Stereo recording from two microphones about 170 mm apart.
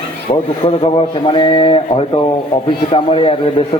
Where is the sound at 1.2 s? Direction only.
30° left (ahead or behind).